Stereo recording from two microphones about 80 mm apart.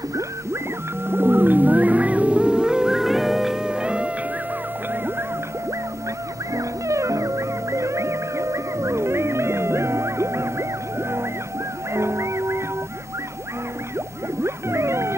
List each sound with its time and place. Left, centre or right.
1.0 s music: right
6.5 s music: right
14.4 s music: right